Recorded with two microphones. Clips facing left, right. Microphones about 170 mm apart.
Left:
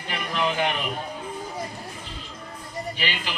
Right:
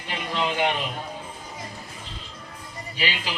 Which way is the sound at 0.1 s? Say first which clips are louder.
Left 1 dB; 25° right (ahead or behind).